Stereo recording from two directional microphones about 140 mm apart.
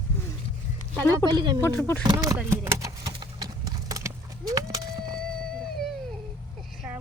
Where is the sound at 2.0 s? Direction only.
25° right (ahead or behind).